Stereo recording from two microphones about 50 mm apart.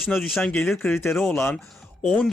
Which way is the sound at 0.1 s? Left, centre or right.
Left.